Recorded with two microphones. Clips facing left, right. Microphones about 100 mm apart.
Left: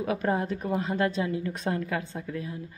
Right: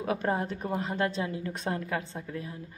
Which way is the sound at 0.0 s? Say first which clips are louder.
Left 2 dB; 35° right (ahead or behind).